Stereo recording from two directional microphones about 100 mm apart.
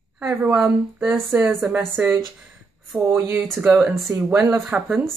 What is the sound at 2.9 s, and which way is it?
Mantra, centre (ahead or behind).